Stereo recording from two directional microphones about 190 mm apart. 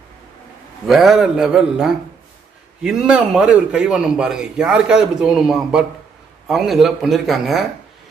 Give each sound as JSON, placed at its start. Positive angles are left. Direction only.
{"t": 0.8, "sound": "a man's voice", "side_deg": 0}